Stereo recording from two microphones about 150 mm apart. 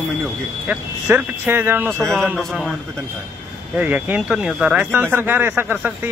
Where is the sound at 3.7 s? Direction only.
10° right (ahead or behind).